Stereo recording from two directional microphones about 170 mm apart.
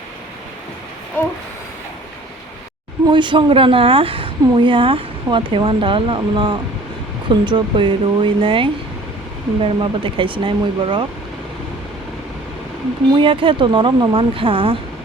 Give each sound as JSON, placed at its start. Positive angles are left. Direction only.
{"t": 1.2, "sound": "a sound", "side_deg": 10}
{"t": 3.1, "sound": "a woman's voice", "side_deg": -30}
{"t": 13.1, "sound": "a woman's voice", "side_deg": -30}